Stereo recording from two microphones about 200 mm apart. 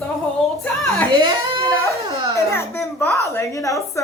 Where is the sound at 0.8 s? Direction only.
5° left (ahead or behind).